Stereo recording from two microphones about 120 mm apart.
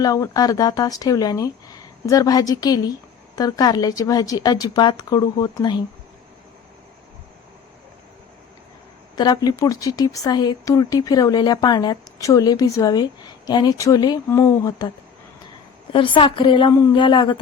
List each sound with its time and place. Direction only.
0.0 s speech: 30° left (ahead or behind)
9.1 s speech: 35° left (ahead or behind)
15.9 s a woman's voice: 45° left (ahead or behind)